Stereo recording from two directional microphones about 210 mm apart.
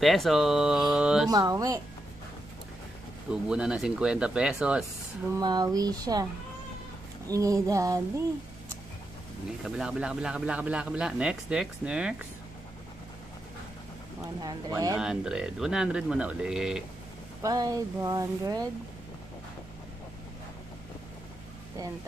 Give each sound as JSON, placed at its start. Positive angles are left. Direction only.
{"t": 0.0, "sound": "speech", "side_deg": 0}
{"t": 1.3, "sound": "speech", "side_deg": -15}
{"t": 3.5, "sound": "speech", "side_deg": -5}
{"t": 5.3, "sound": "speech", "side_deg": -20}
{"t": 7.3, "sound": "speech", "side_deg": -15}
{"t": 9.6, "sound": "speech", "side_deg": 0}
{"t": 14.4, "sound": "speech", "side_deg": -15}
{"t": 14.9, "sound": "speech", "side_deg": -5}
{"t": 17.4, "sound": "speech", "side_deg": -15}